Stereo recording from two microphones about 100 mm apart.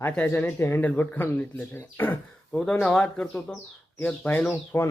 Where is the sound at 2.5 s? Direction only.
10° left (ahead or behind).